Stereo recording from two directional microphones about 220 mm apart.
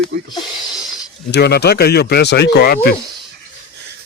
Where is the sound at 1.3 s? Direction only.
50° left (ahead or behind).